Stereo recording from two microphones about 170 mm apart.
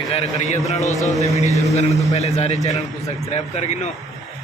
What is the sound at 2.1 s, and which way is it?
A man's voice, 40° left (ahead or behind).